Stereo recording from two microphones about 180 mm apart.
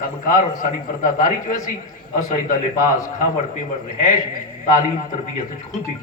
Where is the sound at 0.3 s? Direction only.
45° left (ahead or behind).